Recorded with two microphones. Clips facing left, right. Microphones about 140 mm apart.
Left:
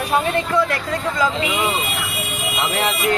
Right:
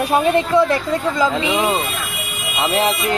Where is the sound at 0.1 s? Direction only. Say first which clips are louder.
Right 3 dB; 25° right (ahead or behind).